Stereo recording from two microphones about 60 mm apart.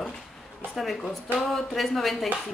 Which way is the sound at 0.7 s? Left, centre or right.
Centre.